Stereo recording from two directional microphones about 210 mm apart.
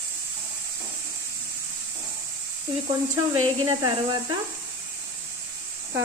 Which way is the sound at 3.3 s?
20° right (ahead or behind).